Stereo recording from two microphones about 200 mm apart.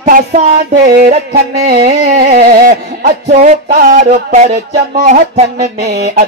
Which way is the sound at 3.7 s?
45° right (ahead or behind).